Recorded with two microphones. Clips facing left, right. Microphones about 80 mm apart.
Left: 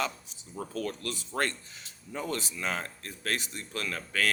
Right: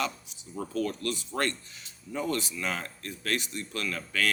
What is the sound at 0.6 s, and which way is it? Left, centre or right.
Speech, left.